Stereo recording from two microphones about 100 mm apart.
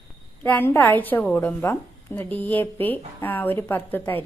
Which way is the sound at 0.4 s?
20° left (ahead or behind).